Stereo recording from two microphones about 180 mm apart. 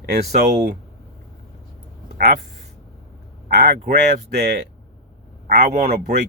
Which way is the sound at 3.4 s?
65° right (ahead or behind).